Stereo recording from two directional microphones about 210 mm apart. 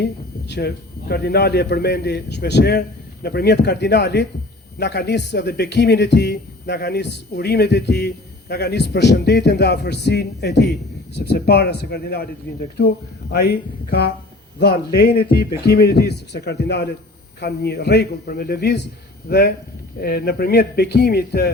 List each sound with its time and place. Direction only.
0.0 s a man's voice: 55° left (ahead or behind)
13.3 s a man's voice: 50° left (ahead or behind)